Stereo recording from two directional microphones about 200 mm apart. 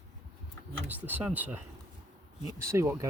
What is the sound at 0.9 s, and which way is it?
Speech, 10° right (ahead or behind).